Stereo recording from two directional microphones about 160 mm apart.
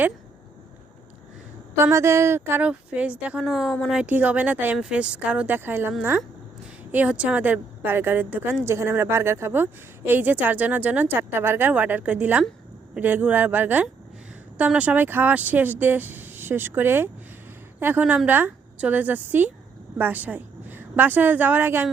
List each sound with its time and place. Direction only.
1.7 s a woman's voice: 15° right (ahead or behind)